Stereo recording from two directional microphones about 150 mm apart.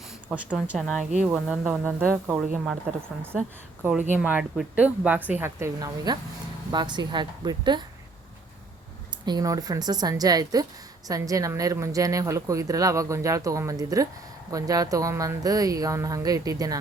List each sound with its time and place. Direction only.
0.3 s a woman's voice: 5° right (ahead or behind)
4.1 s speech: 10° right (ahead or behind); by 7.9 s 30° right (ahead or behind)
9.2 s speech: 25° right (ahead or behind)